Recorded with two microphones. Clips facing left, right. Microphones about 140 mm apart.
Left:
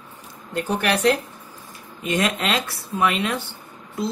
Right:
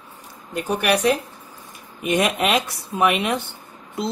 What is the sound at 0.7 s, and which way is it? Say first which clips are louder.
Speech: right 1 dB; 10° right (ahead or behind).